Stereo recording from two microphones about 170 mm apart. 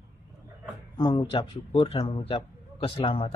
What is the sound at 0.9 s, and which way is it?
A man's voice, 25° left (ahead or behind).